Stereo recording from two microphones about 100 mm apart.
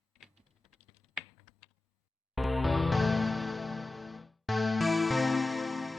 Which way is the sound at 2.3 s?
Centre (ahead or behind).